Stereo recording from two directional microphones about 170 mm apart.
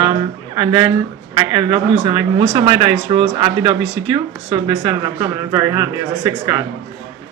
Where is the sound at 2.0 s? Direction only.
30° right (ahead or behind).